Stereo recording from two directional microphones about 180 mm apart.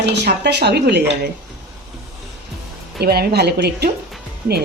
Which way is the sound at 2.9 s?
60° right (ahead or behind).